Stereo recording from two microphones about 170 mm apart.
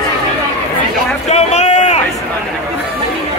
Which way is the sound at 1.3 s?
40° left (ahead or behind).